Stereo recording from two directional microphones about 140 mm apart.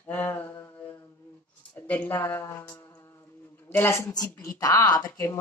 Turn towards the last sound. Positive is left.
turn(degrees=25)  # may be behind; listen again after turning